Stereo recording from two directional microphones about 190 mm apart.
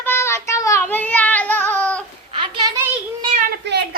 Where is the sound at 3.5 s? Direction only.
60° right (ahead or behind).